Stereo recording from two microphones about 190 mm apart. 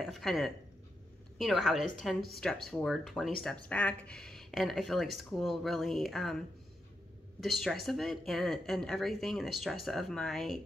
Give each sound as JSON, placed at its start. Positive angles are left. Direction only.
{"t": 0.0, "sound": "speech", "side_deg": 0}
{"t": 7.3, "sound": "speech", "side_deg": 0}